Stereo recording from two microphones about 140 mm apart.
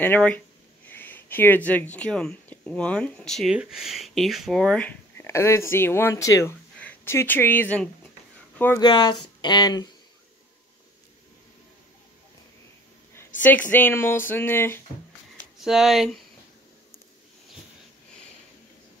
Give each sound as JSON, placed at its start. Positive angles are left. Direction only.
{"t": 0.0, "sound": "speech", "side_deg": 10}
{"t": 5.1, "sound": "speech", "side_deg": 20}
{"t": 8.7, "sound": "speech", "side_deg": 30}
{"t": 13.1, "sound": "speech", "side_deg": 15}
{"t": 15.6, "sound": "speech", "side_deg": -5}